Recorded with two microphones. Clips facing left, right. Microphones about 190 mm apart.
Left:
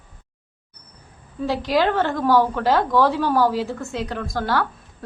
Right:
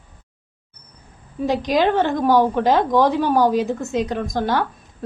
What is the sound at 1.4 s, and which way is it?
A woman's voice, 15° right (ahead or behind).